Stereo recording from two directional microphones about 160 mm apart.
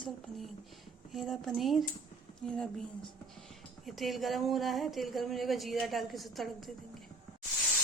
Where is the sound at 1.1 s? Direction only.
Centre (ahead or behind).